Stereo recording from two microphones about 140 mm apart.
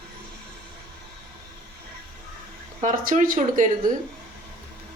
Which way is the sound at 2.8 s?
70° right (ahead or behind).